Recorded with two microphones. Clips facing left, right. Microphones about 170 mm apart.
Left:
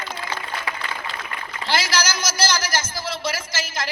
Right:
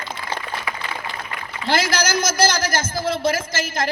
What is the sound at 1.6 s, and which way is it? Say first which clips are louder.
A man's voice: right 3 dB; 55° right (ahead or behind).